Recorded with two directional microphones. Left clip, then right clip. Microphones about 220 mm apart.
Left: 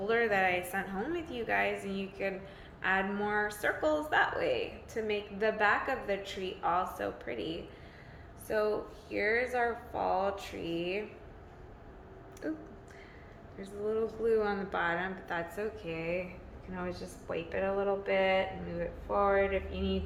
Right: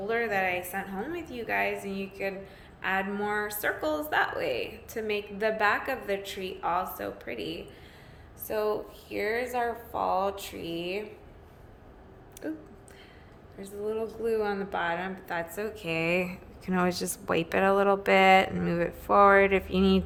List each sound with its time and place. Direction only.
0.0 s a woman's voice: centre (ahead or behind)
12.4 s a woman's voice: 20° right (ahead or behind); by 16.2 s 40° right (ahead or behind)
16.6 s speech: 55° right (ahead or behind)